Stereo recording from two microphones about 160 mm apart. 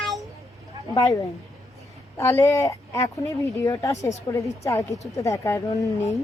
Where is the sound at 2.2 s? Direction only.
15° left (ahead or behind).